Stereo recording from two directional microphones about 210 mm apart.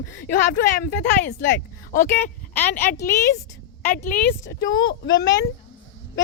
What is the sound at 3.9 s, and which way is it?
Speech, 40° left (ahead or behind).